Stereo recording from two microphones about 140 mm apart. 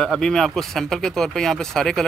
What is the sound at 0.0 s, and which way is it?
Speech, 5° left (ahead or behind).